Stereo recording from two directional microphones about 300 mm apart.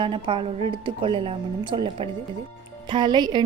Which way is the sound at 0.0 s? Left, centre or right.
Centre.